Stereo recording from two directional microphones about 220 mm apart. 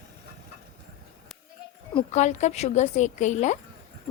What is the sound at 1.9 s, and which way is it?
A woman's voice, 30° left (ahead or behind).